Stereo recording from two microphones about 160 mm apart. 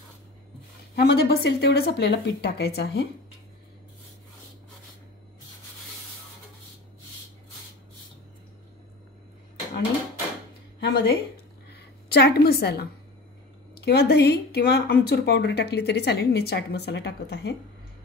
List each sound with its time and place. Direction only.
0.9 s speech: 85° left
10.8 s speech: 75° left (ahead or behind)
11.7 s a woman's voice: 90° left